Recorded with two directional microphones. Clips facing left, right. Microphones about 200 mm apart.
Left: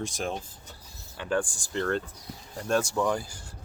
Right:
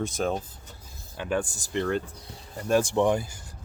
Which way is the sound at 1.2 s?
20° right (ahead or behind).